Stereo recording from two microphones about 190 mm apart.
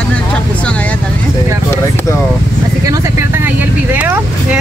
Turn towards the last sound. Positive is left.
turn(degrees=-5)  # may be behind; listen again after turning